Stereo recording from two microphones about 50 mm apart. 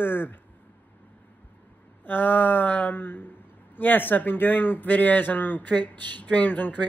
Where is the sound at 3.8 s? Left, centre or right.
Left.